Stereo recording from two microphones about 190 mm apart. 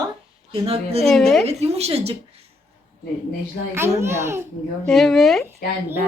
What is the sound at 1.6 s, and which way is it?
Speech, 35° right (ahead or behind).